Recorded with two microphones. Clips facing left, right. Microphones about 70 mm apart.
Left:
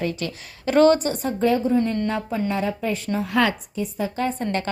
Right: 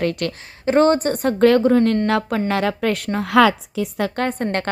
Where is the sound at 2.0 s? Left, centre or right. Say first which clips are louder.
Right 5 dB; right.